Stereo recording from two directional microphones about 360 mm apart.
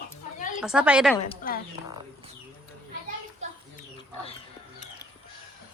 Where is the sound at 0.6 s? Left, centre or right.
Centre.